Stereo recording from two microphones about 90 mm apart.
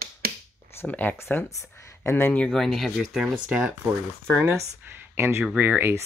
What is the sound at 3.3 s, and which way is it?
Speech, 10° right (ahead or behind).